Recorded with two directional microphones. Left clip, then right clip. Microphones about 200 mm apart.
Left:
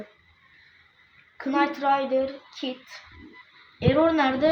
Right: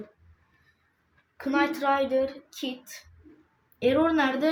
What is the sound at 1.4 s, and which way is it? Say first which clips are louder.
A child's voice: left 2 dB; centre (ahead or behind).